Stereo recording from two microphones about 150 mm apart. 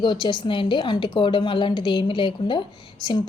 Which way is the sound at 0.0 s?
30° left (ahead or behind).